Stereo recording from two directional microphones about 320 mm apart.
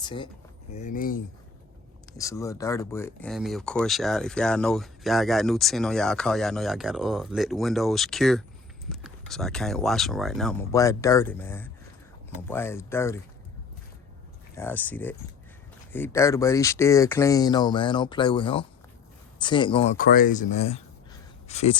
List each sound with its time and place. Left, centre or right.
0.0 s speech: centre
2.1 s speech: centre
14.5 s speech: centre